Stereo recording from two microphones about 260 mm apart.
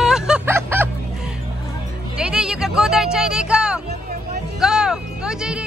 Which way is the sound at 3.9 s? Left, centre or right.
Right.